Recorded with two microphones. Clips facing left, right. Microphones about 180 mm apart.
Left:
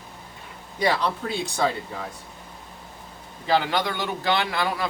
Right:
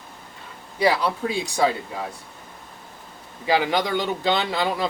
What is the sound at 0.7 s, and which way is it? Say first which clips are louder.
Speech: right 3 dB; 10° right (ahead or behind).